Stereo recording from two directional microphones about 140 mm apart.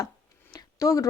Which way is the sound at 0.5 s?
20° left (ahead or behind).